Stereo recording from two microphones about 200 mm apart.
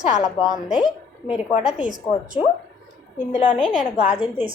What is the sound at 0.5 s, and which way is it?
Speech, centre (ahead or behind).